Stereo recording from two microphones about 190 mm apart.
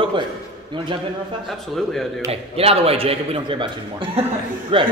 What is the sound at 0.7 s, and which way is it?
Speech, 25° right (ahead or behind).